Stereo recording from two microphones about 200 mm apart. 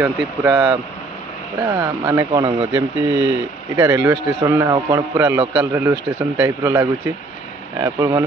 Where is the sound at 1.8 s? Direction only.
15° right (ahead or behind).